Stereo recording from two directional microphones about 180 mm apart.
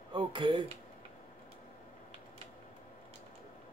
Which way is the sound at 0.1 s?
25° right (ahead or behind).